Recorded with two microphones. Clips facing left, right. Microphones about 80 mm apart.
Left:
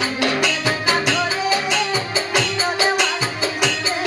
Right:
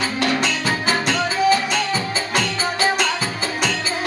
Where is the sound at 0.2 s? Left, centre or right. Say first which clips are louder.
Even; centre.